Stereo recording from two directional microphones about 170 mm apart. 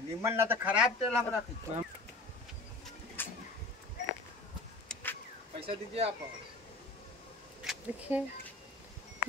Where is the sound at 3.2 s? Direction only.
10° left (ahead or behind).